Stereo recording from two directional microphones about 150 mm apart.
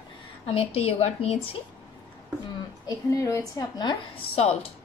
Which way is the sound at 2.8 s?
20° left (ahead or behind).